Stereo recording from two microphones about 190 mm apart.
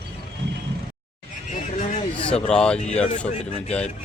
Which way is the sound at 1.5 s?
45° left (ahead or behind).